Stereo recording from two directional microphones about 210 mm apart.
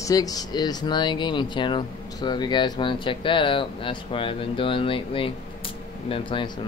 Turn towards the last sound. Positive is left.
turn(degrees=25)  # may be behind; listen again after turning